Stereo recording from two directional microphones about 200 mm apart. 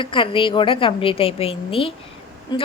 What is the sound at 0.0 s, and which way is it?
A woman's voice, 25° left (ahead or behind).